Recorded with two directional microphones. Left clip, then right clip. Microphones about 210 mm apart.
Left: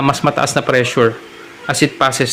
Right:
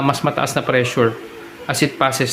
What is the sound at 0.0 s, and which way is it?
Speech, 15° left (ahead or behind).